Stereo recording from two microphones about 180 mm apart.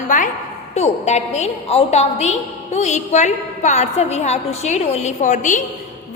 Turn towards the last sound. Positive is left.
turn(degrees=45)  # may be behind; listen again after turning